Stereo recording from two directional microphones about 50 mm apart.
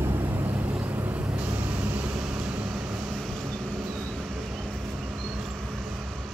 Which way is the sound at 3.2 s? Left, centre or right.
Centre.